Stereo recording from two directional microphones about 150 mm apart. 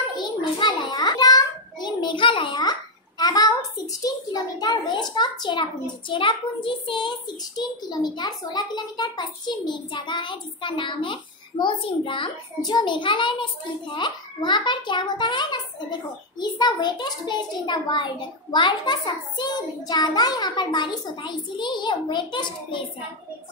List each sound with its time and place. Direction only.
0.2 s a child's voice: 30° left (ahead or behind)